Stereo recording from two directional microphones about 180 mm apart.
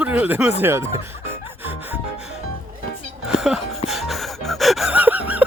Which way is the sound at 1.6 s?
10° right (ahead or behind).